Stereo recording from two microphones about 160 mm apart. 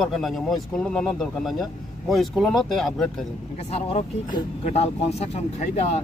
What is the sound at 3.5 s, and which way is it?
Speech, 40° left (ahead or behind).